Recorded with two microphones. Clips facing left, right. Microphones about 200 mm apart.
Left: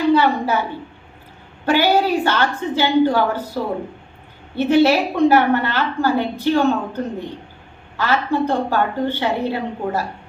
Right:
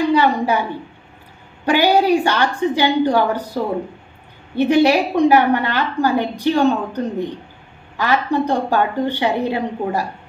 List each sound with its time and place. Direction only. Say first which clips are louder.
0.1 s a woman's voice: even; 15° right (ahead or behind)
1.7 s a woman's voice: right 2 dB; 15° right (ahead or behind)